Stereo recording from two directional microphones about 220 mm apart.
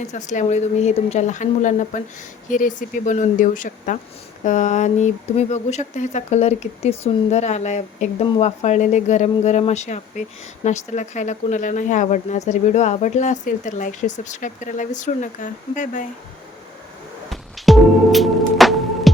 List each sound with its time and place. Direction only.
0.1 s speech: 35° left (ahead or behind)
17.2 s music: centre (ahead or behind)